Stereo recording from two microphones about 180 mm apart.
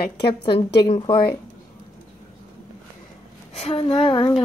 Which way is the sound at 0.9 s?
25° left (ahead or behind).